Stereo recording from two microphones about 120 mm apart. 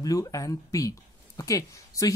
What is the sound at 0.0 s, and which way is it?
Speech, 30° left (ahead or behind).